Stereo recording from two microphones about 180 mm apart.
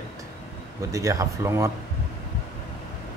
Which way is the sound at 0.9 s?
15° right (ahead or behind).